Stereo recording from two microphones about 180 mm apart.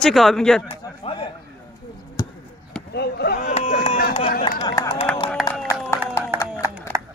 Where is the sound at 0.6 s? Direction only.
30° left (ahead or behind).